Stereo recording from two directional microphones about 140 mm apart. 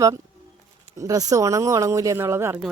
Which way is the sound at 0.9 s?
25° right (ahead or behind).